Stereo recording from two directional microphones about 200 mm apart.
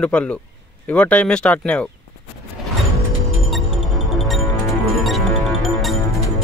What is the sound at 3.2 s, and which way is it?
Music, centre (ahead or behind).